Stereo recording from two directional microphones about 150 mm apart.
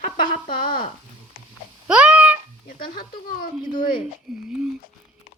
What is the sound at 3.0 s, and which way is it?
Speech, 70° left (ahead or behind).